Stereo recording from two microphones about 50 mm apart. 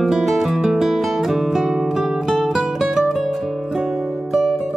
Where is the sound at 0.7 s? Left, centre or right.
Centre.